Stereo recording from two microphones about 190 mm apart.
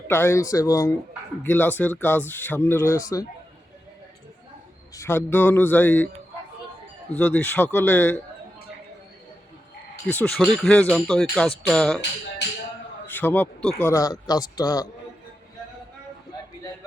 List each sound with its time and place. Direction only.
0.1 s speech: 15° left (ahead or behind)
4.9 s speech: 10° left (ahead or behind)
7.2 s speech: 10° left (ahead or behind)
10.1 s speech: 10° left (ahead or behind)
13.1 s speech: 10° left (ahead or behind)